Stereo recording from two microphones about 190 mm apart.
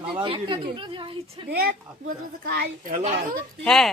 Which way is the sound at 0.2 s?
25° right (ahead or behind).